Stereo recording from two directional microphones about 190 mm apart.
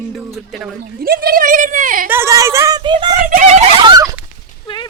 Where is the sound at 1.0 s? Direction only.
50° right (ahead or behind).